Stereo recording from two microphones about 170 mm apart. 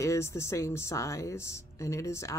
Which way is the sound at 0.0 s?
15° left (ahead or behind).